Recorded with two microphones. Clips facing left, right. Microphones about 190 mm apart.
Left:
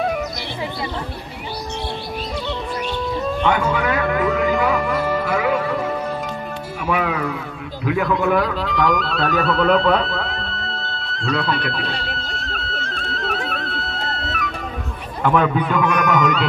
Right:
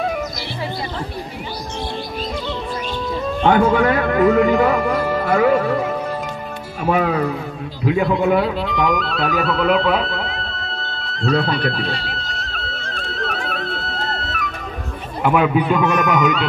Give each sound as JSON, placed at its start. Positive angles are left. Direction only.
{"t": 3.4, "sound": "speech", "side_deg": -55}
{"t": 3.8, "sound": "music", "side_deg": -45}
{"t": 6.8, "sound": "speech", "side_deg": -40}
{"t": 7.8, "sound": "a man's voice", "side_deg": -25}
{"t": 8.9, "sound": "music", "side_deg": 0}
{"t": 15.2, "sound": "a man's voice", "side_deg": -10}
{"t": 15.8, "sound": "a man's voice", "side_deg": -25}
{"t": 16.2, "sound": "speech", "side_deg": 0}